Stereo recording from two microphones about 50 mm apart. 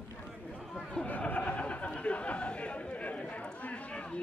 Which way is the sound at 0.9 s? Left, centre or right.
Left.